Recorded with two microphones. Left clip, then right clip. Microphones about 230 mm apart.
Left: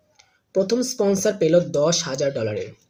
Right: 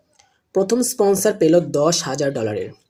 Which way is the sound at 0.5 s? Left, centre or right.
Centre.